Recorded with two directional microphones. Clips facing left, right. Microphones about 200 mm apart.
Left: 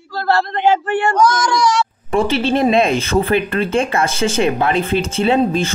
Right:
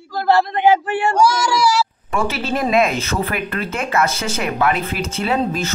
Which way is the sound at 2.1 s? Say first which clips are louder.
Left 5 dB; 30° left (ahead or behind).